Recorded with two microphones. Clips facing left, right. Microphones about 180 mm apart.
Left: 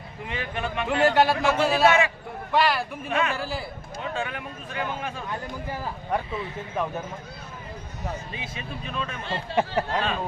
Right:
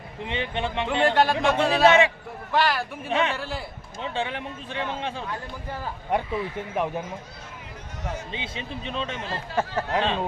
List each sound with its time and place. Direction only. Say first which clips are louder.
0.2 s speech: right 3 dB; 25° right (ahead or behind)
0.9 s a man's voice: left 1 dB; 5° left (ahead or behind)
3.1 s speech: right 1 dB; 25° right (ahead or behind)
3.3 s a man's voice: left 1 dB; centre (ahead or behind)
4.0 s speech: right 2 dB; 30° right (ahead or behind)
8.3 s speech: right 2 dB; 25° right (ahead or behind)
9.2 s speech: left 1 dB; 30° left (ahead or behind)
10.0 s speech: right 2 dB; 25° right (ahead or behind)